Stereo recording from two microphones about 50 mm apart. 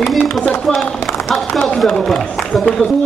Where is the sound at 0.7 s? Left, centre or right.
Centre.